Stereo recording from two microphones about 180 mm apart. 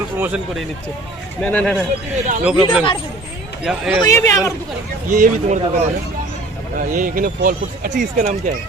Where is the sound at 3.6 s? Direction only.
5° right (ahead or behind).